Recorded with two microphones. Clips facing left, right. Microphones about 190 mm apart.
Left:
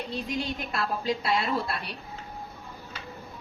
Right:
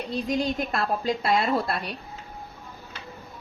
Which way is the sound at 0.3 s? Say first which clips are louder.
Right 6 dB; 45° right (ahead or behind).